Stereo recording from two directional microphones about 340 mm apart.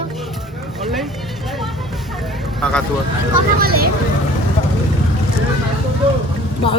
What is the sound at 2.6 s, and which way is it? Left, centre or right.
Speech, centre.